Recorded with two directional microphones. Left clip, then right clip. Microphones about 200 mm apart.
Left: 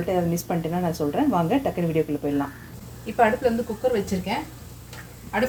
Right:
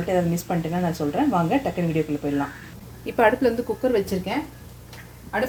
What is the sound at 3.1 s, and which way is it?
Speech, 55° right (ahead or behind).